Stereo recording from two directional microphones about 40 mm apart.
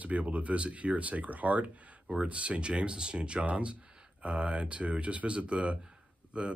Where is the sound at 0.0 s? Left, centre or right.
Right.